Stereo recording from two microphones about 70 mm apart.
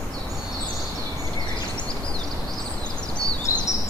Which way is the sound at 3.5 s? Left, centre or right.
Left.